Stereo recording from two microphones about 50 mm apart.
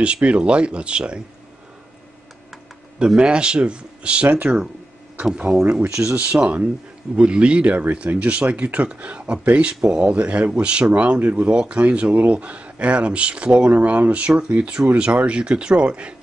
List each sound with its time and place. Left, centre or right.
0.0 s speech: right
3.2 s speech: centre
5.7 s speech: right
5.9 s speech: right
9.8 s speech: centre
10.1 s speech: right